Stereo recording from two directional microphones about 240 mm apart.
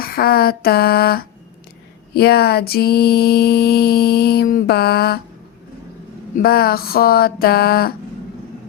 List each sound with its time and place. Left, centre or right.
0.0 s mantra: left
6.4 s mantra: left